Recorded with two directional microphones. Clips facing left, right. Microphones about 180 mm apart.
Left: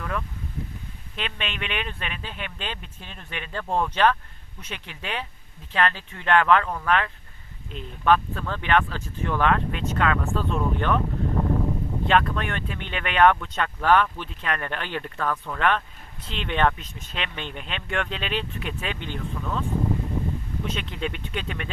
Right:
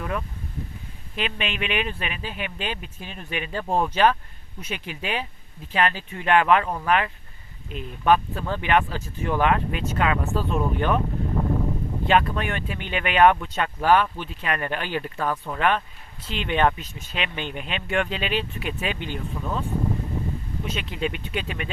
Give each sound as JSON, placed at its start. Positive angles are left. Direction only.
{"t": 0.0, "sound": "speech", "side_deg": -15}
{"t": 12.0, "sound": "speech", "side_deg": -5}
{"t": 20.7, "sound": "speech", "side_deg": -5}